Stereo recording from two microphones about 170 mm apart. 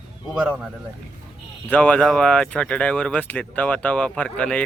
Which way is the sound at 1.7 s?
10° left (ahead or behind).